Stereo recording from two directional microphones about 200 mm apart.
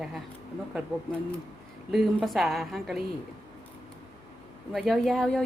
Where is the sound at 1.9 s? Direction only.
Centre (ahead or behind).